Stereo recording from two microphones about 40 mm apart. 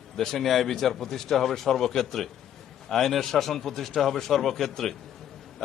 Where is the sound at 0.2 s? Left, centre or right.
Centre.